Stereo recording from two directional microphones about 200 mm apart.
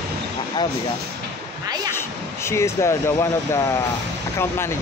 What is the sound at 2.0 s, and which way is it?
Speech, 15° left (ahead or behind).